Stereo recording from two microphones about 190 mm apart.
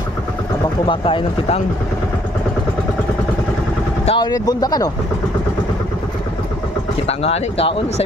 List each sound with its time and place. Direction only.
0.8 s speech: 25° left (ahead or behind)
4.0 s vehicle: 30° left (ahead or behind)
4.3 s speech: 20° left (ahead or behind)
7.1 s speech: 35° left (ahead or behind)